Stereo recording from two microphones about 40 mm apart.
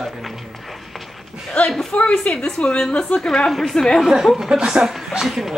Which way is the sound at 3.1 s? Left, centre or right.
Centre.